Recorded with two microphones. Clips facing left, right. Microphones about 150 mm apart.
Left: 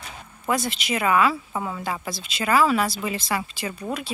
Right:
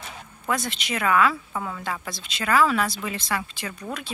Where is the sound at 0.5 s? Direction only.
5° left (ahead or behind).